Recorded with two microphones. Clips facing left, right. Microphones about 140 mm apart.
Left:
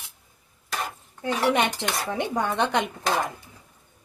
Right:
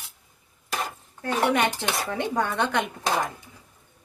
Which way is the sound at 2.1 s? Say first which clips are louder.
Left 1 dB; 20° left (ahead or behind).